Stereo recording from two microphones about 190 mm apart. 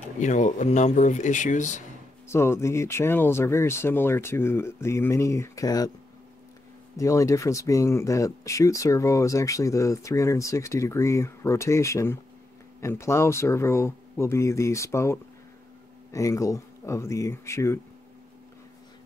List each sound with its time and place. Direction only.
0.2 s speech: 40° left (ahead or behind)
2.2 s speech: 15° left (ahead or behind)
7.0 s speech: 15° left (ahead or behind)